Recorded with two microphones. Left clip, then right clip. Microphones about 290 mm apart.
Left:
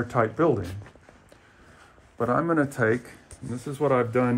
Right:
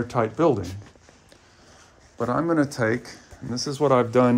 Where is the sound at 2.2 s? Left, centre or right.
Centre.